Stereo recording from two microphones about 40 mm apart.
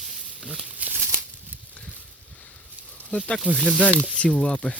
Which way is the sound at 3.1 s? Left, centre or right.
Left.